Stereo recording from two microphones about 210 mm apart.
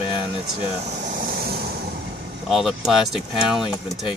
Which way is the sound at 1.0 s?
45° right (ahead or behind).